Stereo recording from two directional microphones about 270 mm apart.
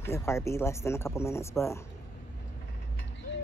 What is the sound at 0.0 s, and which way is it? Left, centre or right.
Speech, centre.